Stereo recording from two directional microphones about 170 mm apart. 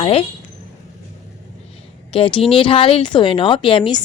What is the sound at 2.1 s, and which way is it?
A woman's voice, 30° left (ahead or behind).